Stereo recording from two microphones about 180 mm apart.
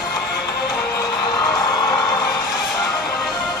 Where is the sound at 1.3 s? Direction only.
20° left (ahead or behind).